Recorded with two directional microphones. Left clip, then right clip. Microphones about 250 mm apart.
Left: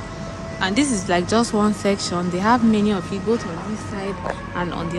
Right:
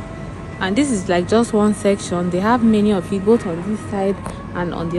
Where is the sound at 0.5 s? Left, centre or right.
Centre.